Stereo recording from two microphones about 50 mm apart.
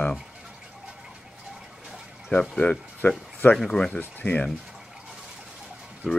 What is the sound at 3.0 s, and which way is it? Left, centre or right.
Speech, left.